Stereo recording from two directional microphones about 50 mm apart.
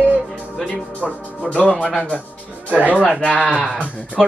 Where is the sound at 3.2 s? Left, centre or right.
Left.